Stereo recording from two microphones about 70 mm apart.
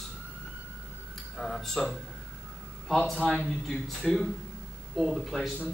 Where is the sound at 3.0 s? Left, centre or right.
Centre.